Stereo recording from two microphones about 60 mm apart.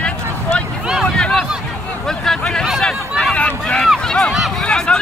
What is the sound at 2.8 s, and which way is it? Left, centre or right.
Hubbub, centre.